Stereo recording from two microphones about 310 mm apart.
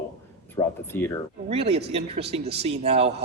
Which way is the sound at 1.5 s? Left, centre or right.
Centre.